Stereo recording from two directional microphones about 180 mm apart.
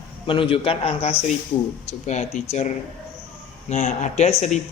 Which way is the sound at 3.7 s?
40° left (ahead or behind).